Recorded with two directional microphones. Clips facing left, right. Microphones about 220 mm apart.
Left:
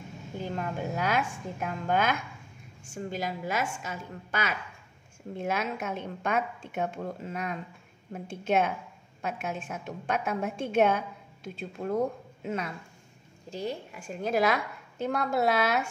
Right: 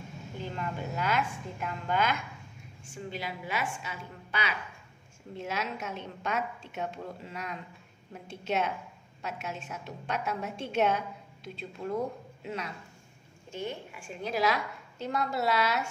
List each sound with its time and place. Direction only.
0.6 s a woman's voice: 45° left (ahead or behind)
12.4 s a woman's voice: 50° left (ahead or behind)
13.5 s a woman's voice: 35° left (ahead or behind); by 15.9 s 55° left (ahead or behind)